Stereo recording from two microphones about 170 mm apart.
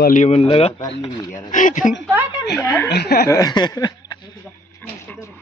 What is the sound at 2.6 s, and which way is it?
Speech, 15° left (ahead or behind).